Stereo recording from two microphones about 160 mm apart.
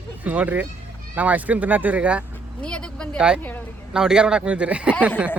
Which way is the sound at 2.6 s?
5° left (ahead or behind).